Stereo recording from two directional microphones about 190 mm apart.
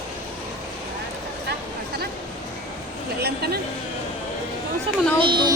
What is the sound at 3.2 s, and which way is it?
Speech, 55° right (ahead or behind).